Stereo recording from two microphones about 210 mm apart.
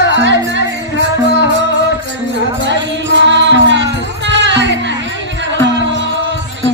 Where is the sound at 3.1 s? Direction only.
60° right (ahead or behind).